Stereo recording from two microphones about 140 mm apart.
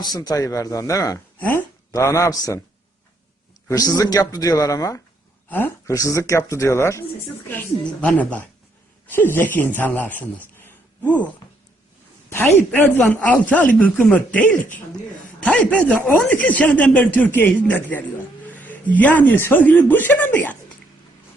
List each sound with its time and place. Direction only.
0.0 s speech: 30° left (ahead or behind)
1.4 s speech: 10° left (ahead or behind)
3.7 s speech: 25° left (ahead or behind)
5.5 s speech: 10° left (ahead or behind)
5.9 s speech: 25° left (ahead or behind)
13.0 s speech: 10° left (ahead or behind)
15.7 s speech: 10° left (ahead or behind)